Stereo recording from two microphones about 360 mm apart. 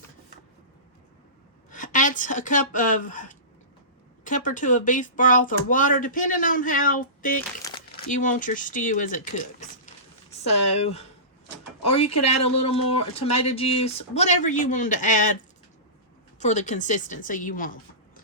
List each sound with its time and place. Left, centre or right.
1.7 s speech: left
12.2 s speech: centre
16.4 s speech: centre